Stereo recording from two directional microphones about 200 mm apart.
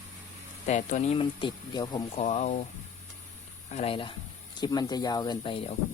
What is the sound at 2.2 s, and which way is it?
Speech, 35° left (ahead or behind).